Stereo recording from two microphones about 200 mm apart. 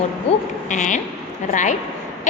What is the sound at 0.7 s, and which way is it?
A woman's voice, 40° left (ahead or behind).